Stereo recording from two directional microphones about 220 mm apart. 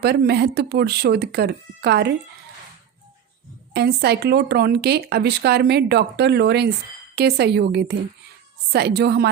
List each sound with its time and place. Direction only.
0.0 s speech: 45° right (ahead or behind)
3.7 s speech: 50° right (ahead or behind)